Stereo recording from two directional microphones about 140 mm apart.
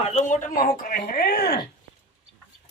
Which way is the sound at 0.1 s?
55° left (ahead or behind).